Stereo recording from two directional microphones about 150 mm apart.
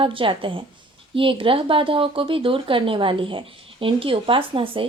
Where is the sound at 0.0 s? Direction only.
35° right (ahead or behind).